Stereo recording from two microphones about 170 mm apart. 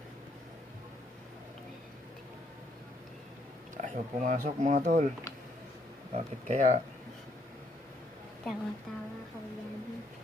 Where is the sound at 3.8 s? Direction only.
50° right (ahead or behind).